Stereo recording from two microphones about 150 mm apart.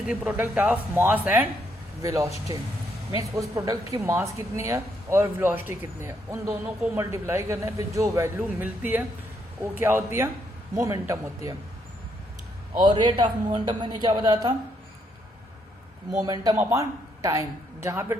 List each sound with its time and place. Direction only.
0.1 s a woman's voice: 10° right (ahead or behind)
12.8 s a woman's voice: 30° right (ahead or behind)
16.2 s a woman's voice: 25° right (ahead or behind)